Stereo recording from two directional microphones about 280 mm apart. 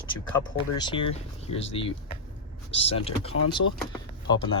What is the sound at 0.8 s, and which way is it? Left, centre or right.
Speech, centre.